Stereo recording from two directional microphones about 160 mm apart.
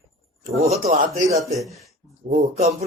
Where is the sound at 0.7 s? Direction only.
45° right (ahead or behind).